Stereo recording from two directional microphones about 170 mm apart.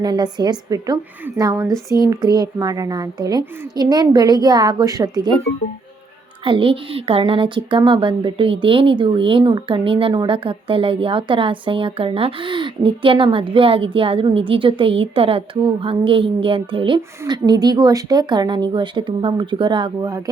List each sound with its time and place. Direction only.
0.0 s a child's voice: 25° right (ahead or behind)
6.4 s a child's voice: 30° right (ahead or behind)